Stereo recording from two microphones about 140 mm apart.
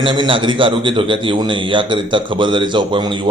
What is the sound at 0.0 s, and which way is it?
A man's voice, 35° right (ahead or behind).